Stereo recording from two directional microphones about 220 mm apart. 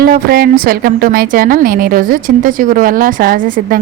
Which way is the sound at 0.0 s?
45° right (ahead or behind).